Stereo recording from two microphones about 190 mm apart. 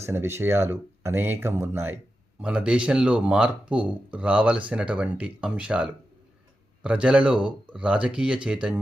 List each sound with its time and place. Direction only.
0.0 s speech: 15° right (ahead or behind)